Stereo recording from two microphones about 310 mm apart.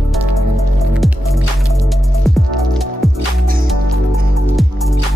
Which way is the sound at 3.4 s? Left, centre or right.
Right.